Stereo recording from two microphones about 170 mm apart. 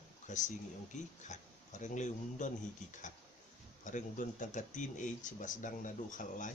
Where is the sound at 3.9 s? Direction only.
50° left (ahead or behind).